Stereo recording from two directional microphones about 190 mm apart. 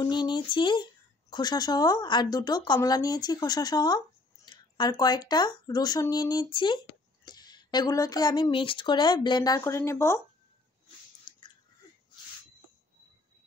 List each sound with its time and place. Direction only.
0.0 s speech: 25° left (ahead or behind)
11.3 s chewing: 25° left (ahead or behind)